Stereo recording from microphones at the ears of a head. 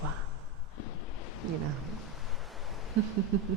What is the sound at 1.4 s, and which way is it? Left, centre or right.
Speech, right.